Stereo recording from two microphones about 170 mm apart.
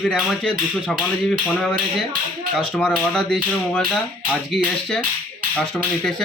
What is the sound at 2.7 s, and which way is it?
Speech, 5° left (ahead or behind).